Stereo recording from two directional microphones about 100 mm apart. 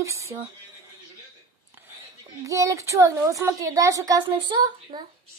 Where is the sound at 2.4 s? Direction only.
30° right (ahead or behind).